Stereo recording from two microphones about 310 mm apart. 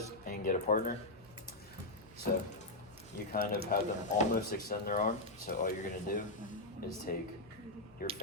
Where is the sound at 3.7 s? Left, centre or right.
Left.